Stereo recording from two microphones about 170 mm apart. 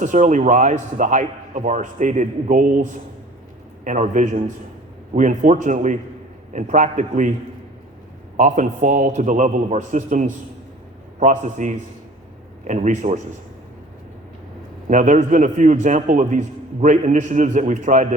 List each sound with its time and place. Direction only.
0.0 s a man's voice: 45° right (ahead or behind)
8.4 s a man's voice: 45° right (ahead or behind)
14.8 s a man's voice: 45° right (ahead or behind)